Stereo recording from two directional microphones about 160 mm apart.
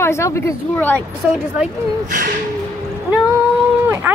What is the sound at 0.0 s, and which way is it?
Speech, 15° left (ahead or behind).